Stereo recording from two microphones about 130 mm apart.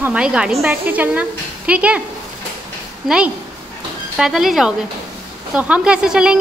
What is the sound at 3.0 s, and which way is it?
A woman's voice, 10° right (ahead or behind).